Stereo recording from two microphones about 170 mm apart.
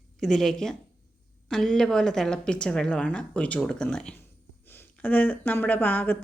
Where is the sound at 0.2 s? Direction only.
Centre (ahead or behind).